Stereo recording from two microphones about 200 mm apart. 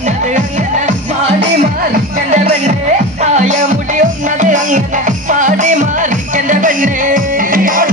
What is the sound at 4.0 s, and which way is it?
Music, 40° right (ahead or behind).